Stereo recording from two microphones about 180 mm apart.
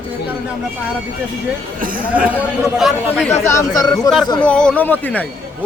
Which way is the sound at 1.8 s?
50° right (ahead or behind).